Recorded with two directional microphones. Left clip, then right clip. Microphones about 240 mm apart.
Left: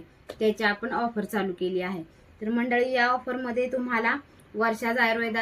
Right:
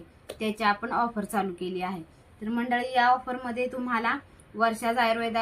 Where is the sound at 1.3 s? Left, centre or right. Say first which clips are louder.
Left 1 dB; centre.